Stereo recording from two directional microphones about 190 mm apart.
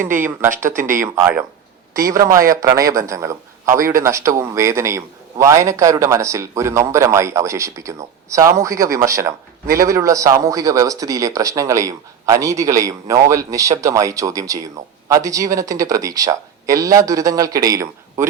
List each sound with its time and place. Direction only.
0.2 s a man's voice: 15° right (ahead or behind)
0.8 s speech: 45° right (ahead or behind)
1.0 s a man's voice: 15° right (ahead or behind)